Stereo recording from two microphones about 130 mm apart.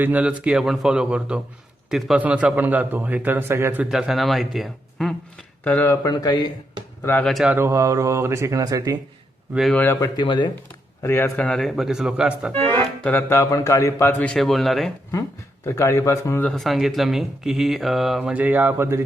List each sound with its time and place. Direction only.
0.0 s a man's voice: 10° right (ahead or behind)
3.8 s speech: 5° right (ahead or behind)
5.6 s speech: 15° left (ahead or behind); by 6.5 s 30° left (ahead or behind)
7.0 s speech: 15° left (ahead or behind)
7.3 s speech: centre (ahead or behind)
7.5 s speech: 20° right (ahead or behind)
9.7 s speech: 15° left (ahead or behind)
10.2 s speech: 35° left (ahead or behind)
11.0 s speech: 20° left (ahead or behind)
11.3 s speech: 5° left (ahead or behind)
12.5 s speech: 15° left (ahead or behind)
13.3 s speech: 25° left (ahead or behind); by 14.9 s centre (ahead or behind)
15.6 s speech: 25° left (ahead or behind)
16.5 s speech: centre (ahead or behind); by 19.0 s 20° right (ahead or behind)